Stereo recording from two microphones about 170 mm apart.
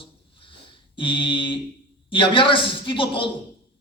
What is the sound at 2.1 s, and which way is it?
A man's voice, 30° left (ahead or behind).